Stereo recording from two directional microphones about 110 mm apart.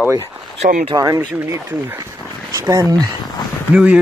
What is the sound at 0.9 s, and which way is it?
Speech, 35° right (ahead or behind).